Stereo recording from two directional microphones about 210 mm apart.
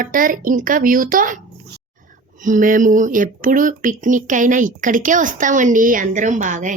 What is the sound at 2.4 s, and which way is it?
Speech, 40° right (ahead or behind).